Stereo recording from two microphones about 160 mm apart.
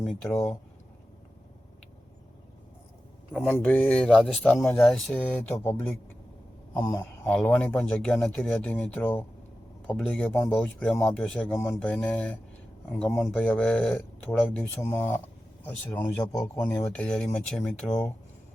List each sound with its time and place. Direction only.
0.1 s speech: 5° left (ahead or behind)
3.3 s speech: 5° left (ahead or behind)